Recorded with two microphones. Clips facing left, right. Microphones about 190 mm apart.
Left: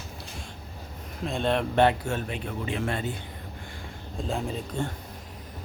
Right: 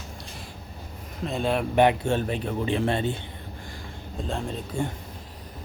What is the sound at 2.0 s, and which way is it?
Speech, 30° right (ahead or behind).